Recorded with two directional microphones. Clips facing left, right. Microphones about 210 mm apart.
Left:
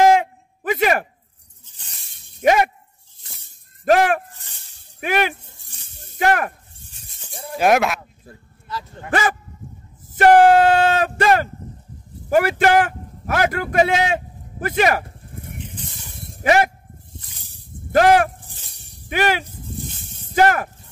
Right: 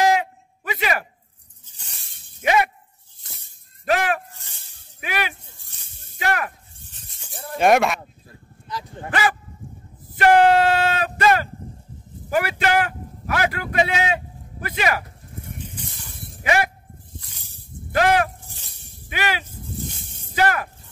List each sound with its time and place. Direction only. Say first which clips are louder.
0.0 s a sound: left 5 dB; 50° left (ahead or behind)
2.4 s speech: left 4 dB; 45° left (ahead or behind)
3.8 s speech: left 6 dB; 50° left (ahead or behind)
5.9 s snake: left 6 dB; 50° left (ahead or behind)
7.3 s speech: even; centre (ahead or behind)
8.6 s speech: left 1 dB; 15° right (ahead or behind)
10.0 s speech: left 3 dB; 45° left (ahead or behind)
12.3 s a man's voice: left 5 dB; 45° left (ahead or behind)
17.9 s speech: left 5 dB; 45° left (ahead or behind)